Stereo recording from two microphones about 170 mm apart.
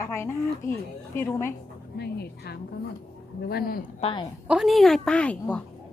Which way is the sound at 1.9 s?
70° left (ahead or behind).